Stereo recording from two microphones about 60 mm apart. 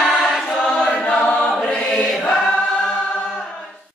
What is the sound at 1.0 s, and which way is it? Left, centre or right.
Choir, centre.